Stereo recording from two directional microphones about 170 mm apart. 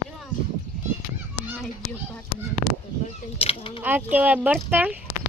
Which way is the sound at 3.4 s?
35° left (ahead or behind).